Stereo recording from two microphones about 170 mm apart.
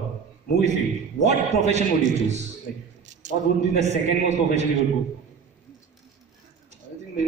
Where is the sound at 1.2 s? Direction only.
40° right (ahead or behind).